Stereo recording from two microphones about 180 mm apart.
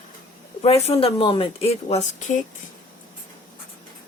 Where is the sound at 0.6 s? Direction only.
35° left (ahead or behind).